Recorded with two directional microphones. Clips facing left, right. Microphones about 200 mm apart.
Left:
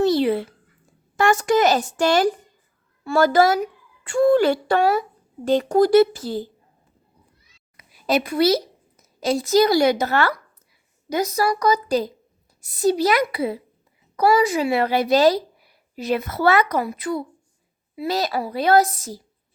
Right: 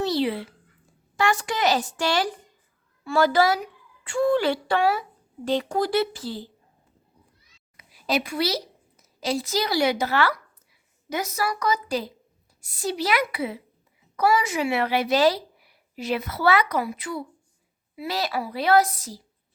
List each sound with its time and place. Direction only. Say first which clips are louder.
0.0 s a sound: left 6 dB; 50° left (ahead or behind)
1.1 s a woman's voice: left 7 dB; 50° left (ahead or behind)
7.8 s a woman's voice: left 5 dB; 50° left (ahead or behind)